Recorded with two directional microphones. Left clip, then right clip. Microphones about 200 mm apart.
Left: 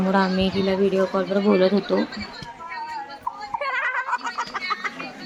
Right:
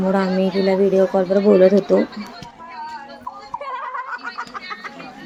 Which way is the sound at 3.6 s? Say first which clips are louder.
Left 3 dB; 20° right (ahead or behind).